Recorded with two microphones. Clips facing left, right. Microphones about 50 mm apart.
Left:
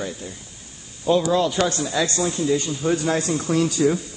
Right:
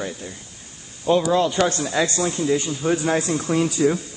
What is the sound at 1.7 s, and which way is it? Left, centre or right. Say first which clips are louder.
Speech: right 1 dB; right.